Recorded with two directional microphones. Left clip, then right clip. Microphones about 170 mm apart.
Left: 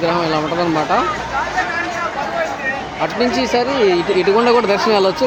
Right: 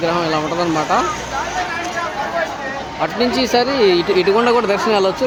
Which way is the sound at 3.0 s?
5° right (ahead or behind).